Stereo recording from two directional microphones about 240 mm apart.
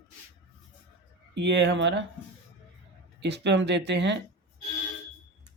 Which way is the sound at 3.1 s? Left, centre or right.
Right.